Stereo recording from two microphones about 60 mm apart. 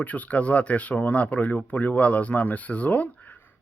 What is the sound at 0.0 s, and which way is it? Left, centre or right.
Speech, left.